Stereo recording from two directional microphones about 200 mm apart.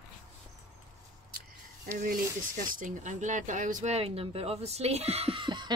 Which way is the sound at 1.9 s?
45° right (ahead or behind).